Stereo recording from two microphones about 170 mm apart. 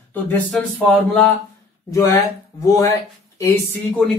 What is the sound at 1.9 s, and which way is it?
Speech, 20° left (ahead or behind).